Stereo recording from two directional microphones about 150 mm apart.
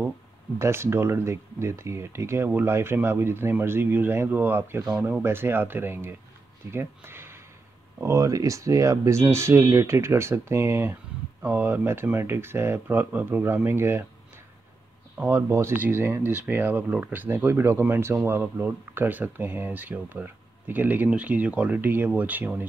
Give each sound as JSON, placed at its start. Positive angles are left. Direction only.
{"t": 0.6, "sound": "speech", "side_deg": -15}
{"t": 4.8, "sound": "speech", "side_deg": -5}
{"t": 5.2, "sound": "speech", "side_deg": -15}
{"t": 15.1, "sound": "speech", "side_deg": -10}